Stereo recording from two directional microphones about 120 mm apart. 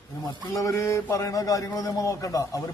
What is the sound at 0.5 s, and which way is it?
A man's voice, 25° left (ahead or behind).